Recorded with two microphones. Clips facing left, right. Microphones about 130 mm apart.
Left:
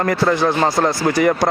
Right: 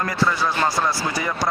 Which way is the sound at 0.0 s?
50° left (ahead or behind).